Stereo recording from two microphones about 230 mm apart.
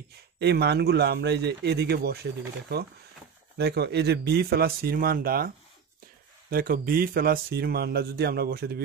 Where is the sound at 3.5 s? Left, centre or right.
Right.